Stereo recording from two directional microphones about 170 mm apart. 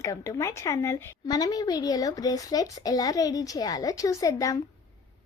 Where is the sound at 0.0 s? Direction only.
20° left (ahead or behind).